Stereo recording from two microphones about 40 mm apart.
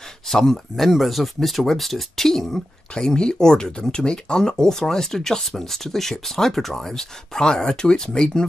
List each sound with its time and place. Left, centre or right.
0.3 s speech: centre
3.2 s speech: centre